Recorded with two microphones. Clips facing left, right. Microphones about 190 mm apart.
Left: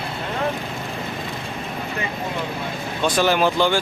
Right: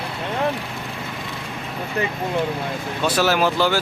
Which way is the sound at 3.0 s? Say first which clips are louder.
Left 1 dB; 5° right (ahead or behind).